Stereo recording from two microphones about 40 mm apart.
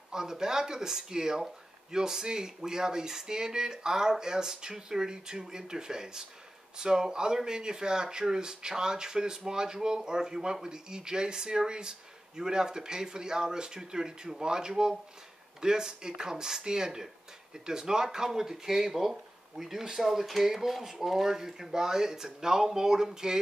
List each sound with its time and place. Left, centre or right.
0.1 s speech: centre